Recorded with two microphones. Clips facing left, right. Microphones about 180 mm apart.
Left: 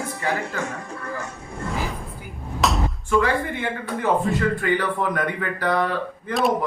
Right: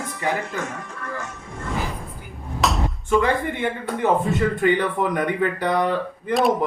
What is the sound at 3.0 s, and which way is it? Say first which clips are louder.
Speech: right 1 dB; 20° right (ahead or behind).